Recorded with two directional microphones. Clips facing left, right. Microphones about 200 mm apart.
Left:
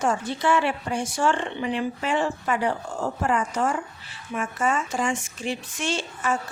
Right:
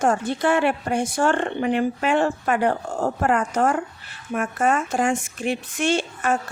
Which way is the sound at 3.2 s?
60° right (ahead or behind).